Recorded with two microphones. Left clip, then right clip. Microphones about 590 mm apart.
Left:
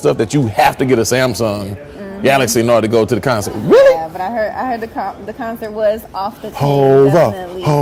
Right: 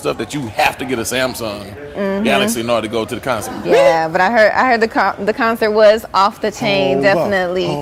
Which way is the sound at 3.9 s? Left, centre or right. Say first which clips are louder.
Right 6 dB; right.